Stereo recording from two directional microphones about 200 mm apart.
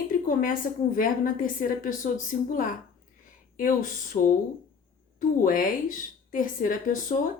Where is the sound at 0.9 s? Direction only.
45° left (ahead or behind).